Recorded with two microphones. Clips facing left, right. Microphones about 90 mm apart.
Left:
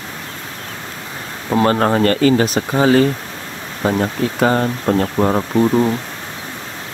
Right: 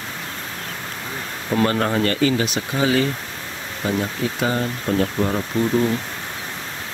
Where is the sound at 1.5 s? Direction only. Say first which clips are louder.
Left 5 dB; 35° left (ahead or behind).